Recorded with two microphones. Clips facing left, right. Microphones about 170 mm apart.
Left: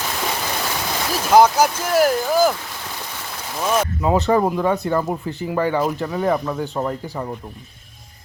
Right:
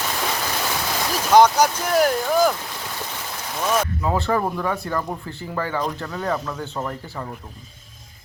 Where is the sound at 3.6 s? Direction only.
15° left (ahead or behind).